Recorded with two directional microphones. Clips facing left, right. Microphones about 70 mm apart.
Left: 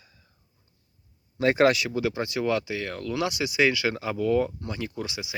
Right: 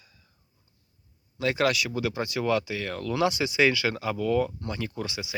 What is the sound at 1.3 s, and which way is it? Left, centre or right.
Speech, left.